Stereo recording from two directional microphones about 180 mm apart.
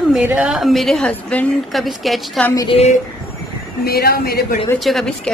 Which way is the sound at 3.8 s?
60° left (ahead or behind).